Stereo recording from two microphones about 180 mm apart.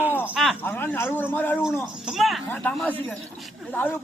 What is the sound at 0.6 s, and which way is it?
Speech, 10° left (ahead or behind).